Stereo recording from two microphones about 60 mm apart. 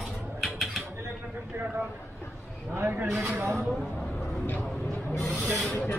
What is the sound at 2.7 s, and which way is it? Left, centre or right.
Speech, right.